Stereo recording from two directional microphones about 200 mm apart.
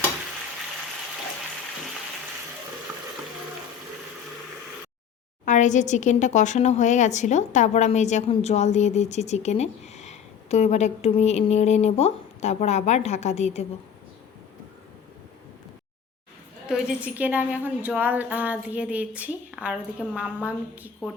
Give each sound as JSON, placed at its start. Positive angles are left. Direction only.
{"t": 5.5, "sound": "a woman's voice", "side_deg": 40}
{"t": 16.6, "sound": "a woman's voice", "side_deg": -5}